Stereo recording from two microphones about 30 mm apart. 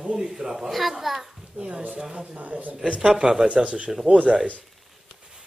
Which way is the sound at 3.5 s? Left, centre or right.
Right.